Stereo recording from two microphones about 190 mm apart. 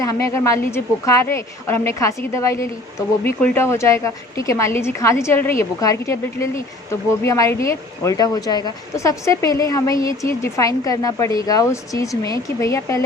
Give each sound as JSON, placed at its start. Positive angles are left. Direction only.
{"t": 0.0, "sound": "a woman's voice", "side_deg": 15}